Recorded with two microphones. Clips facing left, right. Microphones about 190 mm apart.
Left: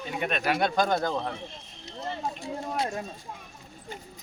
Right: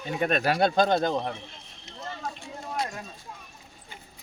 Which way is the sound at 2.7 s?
30° left (ahead or behind).